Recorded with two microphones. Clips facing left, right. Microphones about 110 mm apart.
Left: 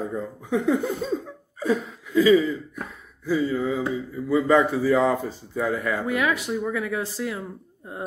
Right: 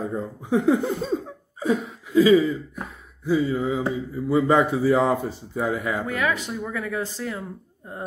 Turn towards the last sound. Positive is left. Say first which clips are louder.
# left 1 dB
turn(degrees=10)  # may be behind; listen again after turning